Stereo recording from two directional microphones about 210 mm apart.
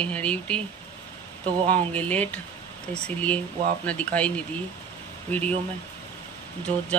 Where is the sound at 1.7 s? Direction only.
5° left (ahead or behind).